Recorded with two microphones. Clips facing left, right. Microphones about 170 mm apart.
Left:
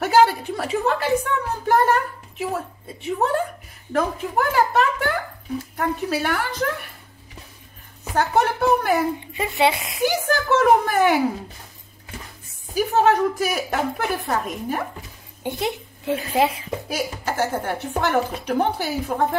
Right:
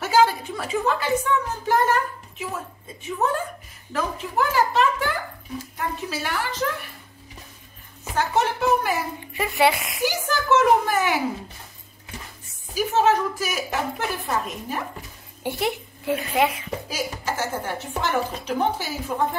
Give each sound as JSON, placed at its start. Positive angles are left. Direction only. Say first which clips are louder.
{"t": 0.0, "sound": "a sound", "louder": "left 3 dB", "side_deg": 60}
{"t": 2.5, "sound": "a woman's voice", "louder": "left 5 dB", "side_deg": 60}
{"t": 3.9, "sound": "a sound", "louder": "left 4 dB", "side_deg": 55}
{"t": 8.1, "sound": "a child's voice", "louder": "left 3 dB", "side_deg": 55}
{"t": 9.6, "sound": "speech", "louder": "even", "side_deg": 25}
{"t": 10.0, "sound": "a child's voice", "louder": "left 3 dB", "side_deg": 55}
{"t": 12.7, "sound": "a woman's voice", "louder": "left 2 dB", "side_deg": 55}
{"t": 15.4, "sound": "a woman's voice", "louder": "even", "side_deg": 20}
{"t": 16.2, "sound": "a woman's voice", "louder": "left 2 dB", "side_deg": 30}
{"t": 16.9, "sound": "a woman's voice", "louder": "left 3 dB", "side_deg": 55}